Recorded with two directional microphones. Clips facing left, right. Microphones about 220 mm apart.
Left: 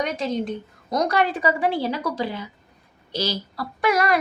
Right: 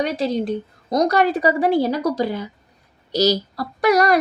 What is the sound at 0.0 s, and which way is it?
Speech, 35° right (ahead or behind).